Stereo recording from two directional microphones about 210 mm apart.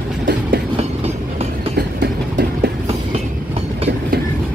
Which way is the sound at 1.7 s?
55° right (ahead or behind).